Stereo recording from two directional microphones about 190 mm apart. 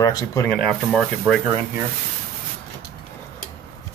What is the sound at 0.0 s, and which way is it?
Speech, 15° left (ahead or behind).